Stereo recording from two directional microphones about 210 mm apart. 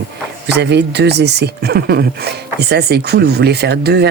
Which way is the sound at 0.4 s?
55° right (ahead or behind).